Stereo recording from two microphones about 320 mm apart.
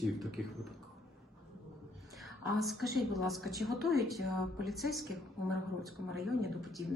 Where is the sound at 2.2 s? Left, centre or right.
Centre.